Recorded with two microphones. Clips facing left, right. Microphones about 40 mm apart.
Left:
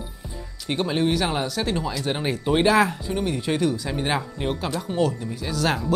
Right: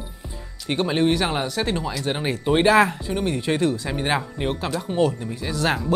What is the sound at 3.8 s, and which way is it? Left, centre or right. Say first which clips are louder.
Speech: right 1 dB; centre.